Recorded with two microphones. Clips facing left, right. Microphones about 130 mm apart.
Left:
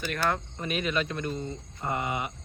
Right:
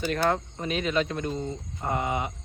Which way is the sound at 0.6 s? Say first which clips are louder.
Right 2 dB; 20° right (ahead or behind).